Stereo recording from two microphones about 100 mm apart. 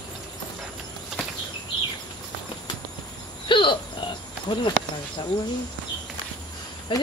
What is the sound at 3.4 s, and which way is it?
Cricket, 55° left (ahead or behind).